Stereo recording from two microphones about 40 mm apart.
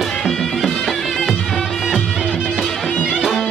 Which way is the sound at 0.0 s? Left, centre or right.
Centre.